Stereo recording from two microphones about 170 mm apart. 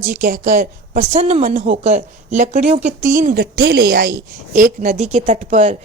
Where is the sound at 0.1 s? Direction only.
55° right (ahead or behind).